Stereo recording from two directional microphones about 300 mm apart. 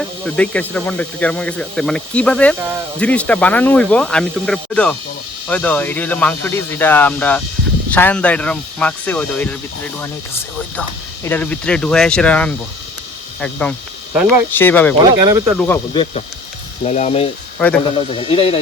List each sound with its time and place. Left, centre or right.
0.0 s speech: centre
15.1 s speech: centre
15.5 s speech: centre